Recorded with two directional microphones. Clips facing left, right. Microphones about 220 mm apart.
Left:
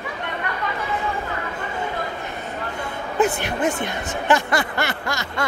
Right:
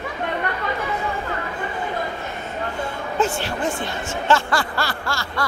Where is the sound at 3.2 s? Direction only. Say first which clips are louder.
Left 3 dB; 20° left (ahead or behind).